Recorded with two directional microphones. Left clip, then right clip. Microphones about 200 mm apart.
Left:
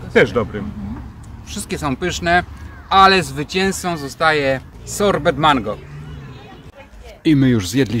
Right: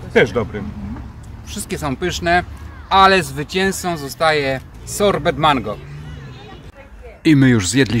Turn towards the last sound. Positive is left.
turn(degrees=-5)  # may be behind; listen again after turning